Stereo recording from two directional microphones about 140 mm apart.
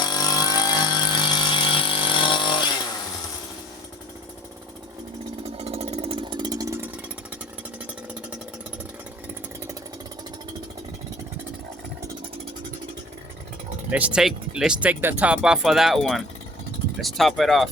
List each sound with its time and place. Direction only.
0.0 s a sound: 30° left (ahead or behind)
5.5 s chainsaw: 45° right (ahead or behind); by 6.7 s 25° right (ahead or behind)
13.9 s speech: 10° right (ahead or behind)